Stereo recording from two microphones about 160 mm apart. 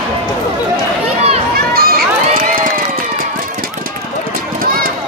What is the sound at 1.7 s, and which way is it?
Crowd, 70° right (ahead or behind).